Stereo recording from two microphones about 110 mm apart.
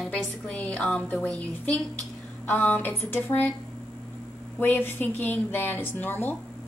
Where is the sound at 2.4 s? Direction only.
15° left (ahead or behind).